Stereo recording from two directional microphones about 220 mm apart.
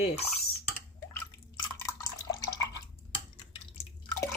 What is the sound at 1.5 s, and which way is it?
Drip, 15° left (ahead or behind).